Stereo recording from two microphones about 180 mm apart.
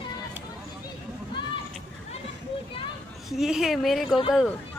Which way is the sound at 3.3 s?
Centre (ahead or behind).